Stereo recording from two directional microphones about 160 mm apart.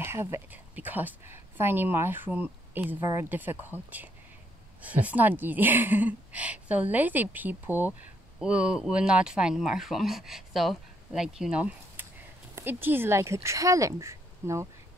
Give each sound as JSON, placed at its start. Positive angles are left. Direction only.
{"t": 0.0, "sound": "speech", "side_deg": -15}